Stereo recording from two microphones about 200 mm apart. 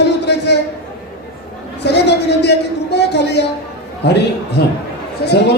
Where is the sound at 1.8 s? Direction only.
60° left (ahead or behind).